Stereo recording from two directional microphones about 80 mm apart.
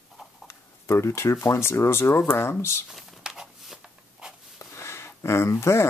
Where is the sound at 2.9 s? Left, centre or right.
Centre.